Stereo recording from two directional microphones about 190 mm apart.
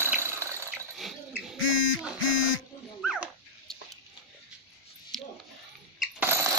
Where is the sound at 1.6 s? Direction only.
90° left.